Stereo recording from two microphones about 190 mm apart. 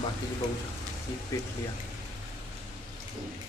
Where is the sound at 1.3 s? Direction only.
15° left (ahead or behind).